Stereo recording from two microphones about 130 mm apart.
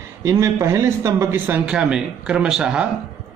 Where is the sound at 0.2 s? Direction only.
20° right (ahead or behind); by 2.9 s 5° right (ahead or behind).